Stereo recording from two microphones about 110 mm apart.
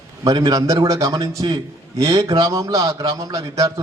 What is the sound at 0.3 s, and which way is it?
A man's voice, 35° right (ahead or behind).